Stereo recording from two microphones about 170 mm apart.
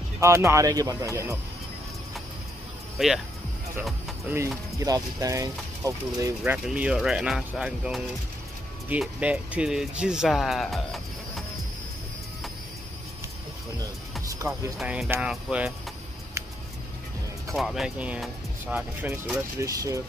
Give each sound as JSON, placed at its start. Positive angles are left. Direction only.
{"t": 0.2, "sound": "speech", "side_deg": -15}
{"t": 3.0, "sound": "speech", "side_deg": 0}
{"t": 4.7, "sound": "speech", "side_deg": -20}
{"t": 14.8, "sound": "speech", "side_deg": -5}
{"t": 17.6, "sound": "speech", "side_deg": 0}